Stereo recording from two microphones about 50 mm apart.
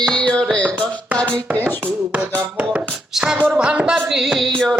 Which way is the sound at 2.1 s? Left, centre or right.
Right.